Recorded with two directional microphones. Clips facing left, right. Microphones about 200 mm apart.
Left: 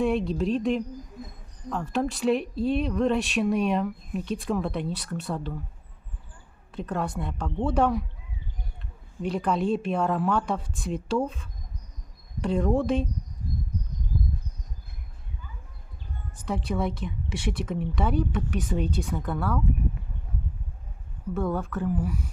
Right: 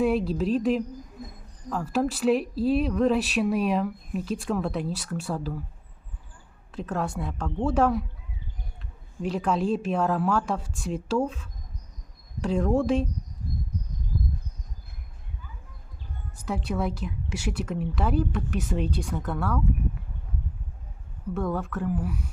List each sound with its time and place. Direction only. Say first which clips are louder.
0.0 s speech: right 1 dB; 5° right (ahead or behind)
6.7 s speech: even; centre (ahead or behind)
9.2 s speech: even; centre (ahead or behind)
16.5 s speech: even; 5° right (ahead or behind)
21.3 s speech: left 1 dB; centre (ahead or behind)